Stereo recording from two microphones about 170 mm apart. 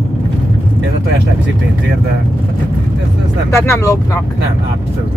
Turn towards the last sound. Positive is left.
turn(degrees=15)  # may be behind; listen again after turning